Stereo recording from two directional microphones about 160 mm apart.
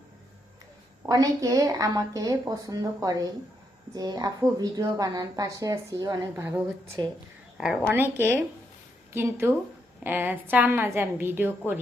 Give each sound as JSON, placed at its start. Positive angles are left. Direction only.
{"t": 1.0, "sound": "a woman's voice", "side_deg": -25}
{"t": 7.9, "sound": "a woman's voice", "side_deg": -10}